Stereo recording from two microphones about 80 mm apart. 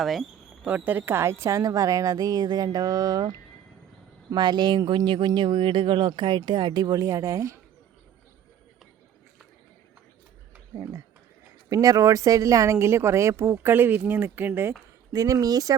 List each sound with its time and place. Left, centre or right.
0.0 s speech: centre
0.6 s a woman's voice: centre; by 3.3 s right
4.4 s speech: right
11.7 s speech: right
15.1 s a woman's voice: right